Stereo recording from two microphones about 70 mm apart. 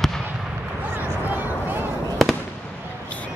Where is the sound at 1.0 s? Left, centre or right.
Right.